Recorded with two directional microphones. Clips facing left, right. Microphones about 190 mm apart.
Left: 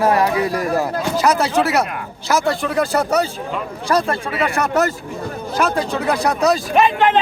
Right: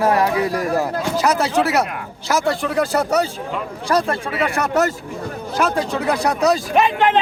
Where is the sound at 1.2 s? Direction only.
25° right (ahead or behind).